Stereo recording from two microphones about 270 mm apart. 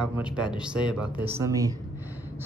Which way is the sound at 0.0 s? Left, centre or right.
Centre.